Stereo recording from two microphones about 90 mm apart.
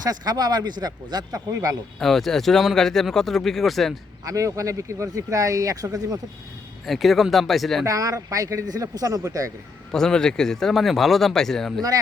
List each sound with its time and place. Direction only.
0.0 s speech: 45° right (ahead or behind)
1.5 s speech: 35° right (ahead or behind)
2.0 s speech: 5° left (ahead or behind)
4.3 s speech: 35° right (ahead or behind)
6.8 s speech: centre (ahead or behind)
7.9 s speech: 40° right (ahead or behind)
9.9 s speech: 5° left (ahead or behind)